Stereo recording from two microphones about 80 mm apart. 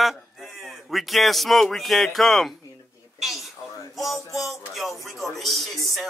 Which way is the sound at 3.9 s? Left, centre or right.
Centre.